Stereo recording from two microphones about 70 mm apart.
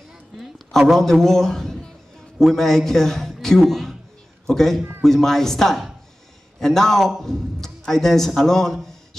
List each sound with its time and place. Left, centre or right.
0.4 s a man's voice: centre